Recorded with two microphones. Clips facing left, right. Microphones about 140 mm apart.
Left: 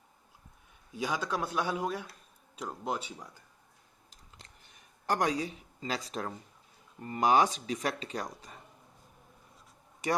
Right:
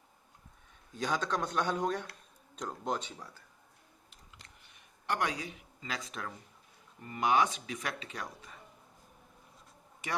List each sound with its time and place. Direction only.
0.9 s a man's voice: 10° left (ahead or behind)
5.0 s speech: 35° left (ahead or behind)
10.0 s speech: 35° left (ahead or behind)